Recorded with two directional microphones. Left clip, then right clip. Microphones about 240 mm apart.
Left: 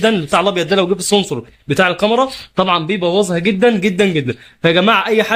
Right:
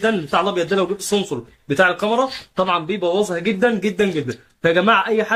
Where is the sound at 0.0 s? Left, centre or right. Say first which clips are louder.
Left 5 dB; left.